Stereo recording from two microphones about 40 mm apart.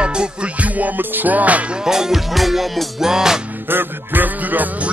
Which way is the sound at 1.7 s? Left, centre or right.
Centre.